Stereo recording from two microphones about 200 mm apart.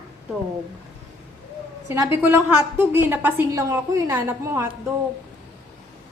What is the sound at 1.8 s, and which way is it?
A woman's voice, 15° right (ahead or behind).